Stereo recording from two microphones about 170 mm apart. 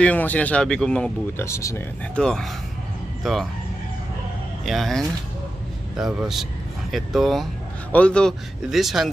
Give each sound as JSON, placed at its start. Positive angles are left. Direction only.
{"t": 0.0, "sound": "speech", "side_deg": 10}
{"t": 1.4, "sound": "speech", "side_deg": 15}
{"t": 2.1, "sound": "speech", "side_deg": 5}
{"t": 4.6, "sound": "speech", "side_deg": 0}